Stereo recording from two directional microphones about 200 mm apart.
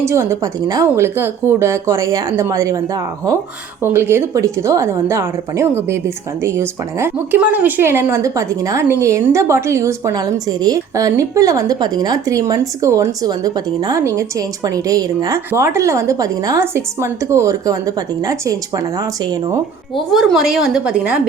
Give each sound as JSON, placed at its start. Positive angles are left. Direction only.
{"t": 0.0, "sound": "a woman's voice", "side_deg": -15}
{"t": 20.1, "sound": "a woman's voice", "side_deg": 0}